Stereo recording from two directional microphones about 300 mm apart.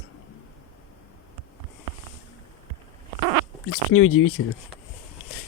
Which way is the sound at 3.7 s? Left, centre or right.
Left.